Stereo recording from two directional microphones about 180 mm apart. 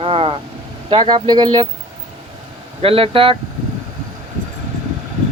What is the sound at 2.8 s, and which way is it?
Speech, 30° right (ahead or behind).